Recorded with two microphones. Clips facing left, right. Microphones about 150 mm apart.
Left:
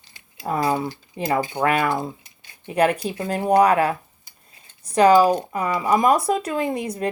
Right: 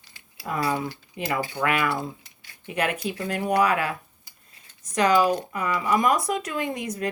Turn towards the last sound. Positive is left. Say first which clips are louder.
# left 4 dB
turn(degrees=30)  # may be behind; listen again after turning